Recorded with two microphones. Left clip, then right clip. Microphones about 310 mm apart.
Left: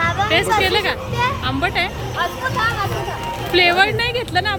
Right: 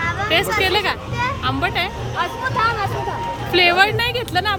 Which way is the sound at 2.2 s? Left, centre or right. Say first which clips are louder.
Even; right.